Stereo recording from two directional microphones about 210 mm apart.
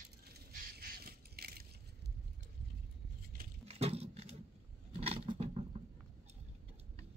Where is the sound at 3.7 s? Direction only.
30° right (ahead or behind).